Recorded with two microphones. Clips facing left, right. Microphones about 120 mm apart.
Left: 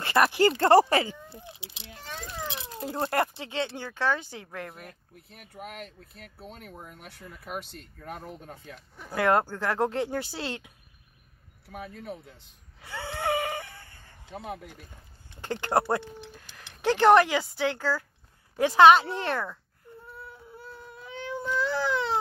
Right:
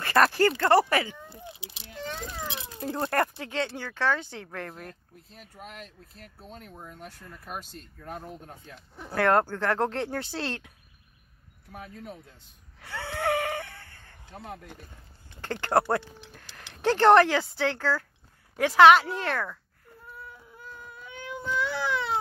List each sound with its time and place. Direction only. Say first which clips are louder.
0.0 s speech: even; 15° left (ahead or behind)
0.6 s speech: left 5 dB; 30° left (ahead or behind)
2.8 s speech: even; 10° left (ahead or behind)
5.6 s speech: left 4 dB; 65° left (ahead or behind)
6.4 s speech: left 1 dB; 10° left (ahead or behind)
7.6 s speech: right 1 dB; 70° left (ahead or behind)
8.0 s speech: even; centre (ahead or behind)
9.1 s speech: right 1 dB; 15° left (ahead or behind)
12.8 s a sound: right 1 dB; 20° left (ahead or behind)
15.4 s speech: right 1 dB; 15° left (ahead or behind)
16.8 s a woman's voice: right 1 dB; 5° left (ahead or behind)
20.2 s baby cry: left 2 dB; 30° left (ahead or behind)